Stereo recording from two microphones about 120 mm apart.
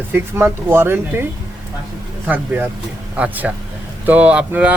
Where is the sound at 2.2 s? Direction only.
15° right (ahead or behind).